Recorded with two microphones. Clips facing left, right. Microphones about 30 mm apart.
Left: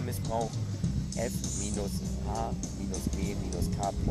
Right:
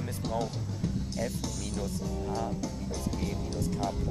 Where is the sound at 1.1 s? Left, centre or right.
Right.